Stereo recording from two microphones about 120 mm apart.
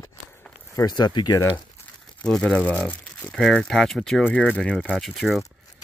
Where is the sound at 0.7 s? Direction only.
35° left (ahead or behind).